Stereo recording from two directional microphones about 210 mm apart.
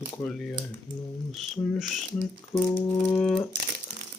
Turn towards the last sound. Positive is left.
turn(degrees=5)  # may be behind; listen again after turning